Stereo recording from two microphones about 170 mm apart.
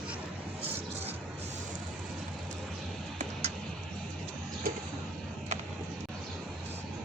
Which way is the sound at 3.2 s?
40° right (ahead or behind).